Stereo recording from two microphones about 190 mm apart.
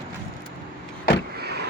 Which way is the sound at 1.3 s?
60° right (ahead or behind).